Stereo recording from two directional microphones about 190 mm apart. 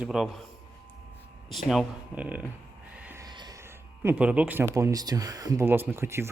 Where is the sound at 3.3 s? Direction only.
20° right (ahead or behind).